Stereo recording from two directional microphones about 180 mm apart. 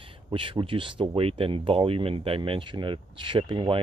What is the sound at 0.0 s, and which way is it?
Speech, 30° right (ahead or behind).